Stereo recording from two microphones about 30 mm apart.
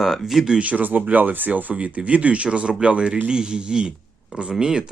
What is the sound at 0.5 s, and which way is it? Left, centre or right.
Speech, right.